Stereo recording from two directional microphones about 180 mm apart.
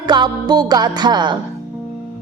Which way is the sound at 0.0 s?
25° right (ahead or behind).